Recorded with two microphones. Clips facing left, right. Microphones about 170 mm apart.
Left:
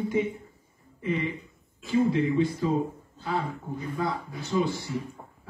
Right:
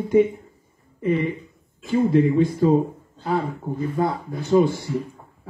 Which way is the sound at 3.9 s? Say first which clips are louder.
Right 5 dB; 55° right (ahead or behind).